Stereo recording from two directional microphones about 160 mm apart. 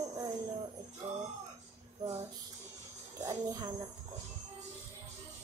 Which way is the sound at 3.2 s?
20° right (ahead or behind).